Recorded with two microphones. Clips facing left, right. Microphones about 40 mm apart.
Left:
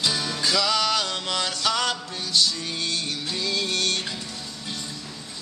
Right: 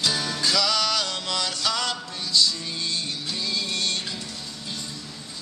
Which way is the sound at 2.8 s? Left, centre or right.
Left.